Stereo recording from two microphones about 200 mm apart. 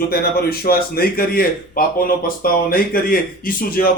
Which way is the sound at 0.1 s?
50° left (ahead or behind).